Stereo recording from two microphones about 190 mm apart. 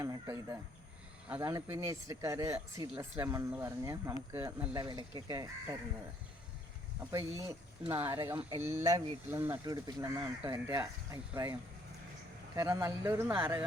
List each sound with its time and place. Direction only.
0.0 s speech: 20° right (ahead or behind)
7.0 s speech: 15° right (ahead or behind)
12.5 s speech: 15° right (ahead or behind)